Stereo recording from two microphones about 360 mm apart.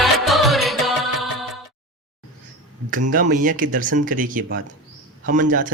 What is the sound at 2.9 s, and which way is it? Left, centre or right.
Speech, right.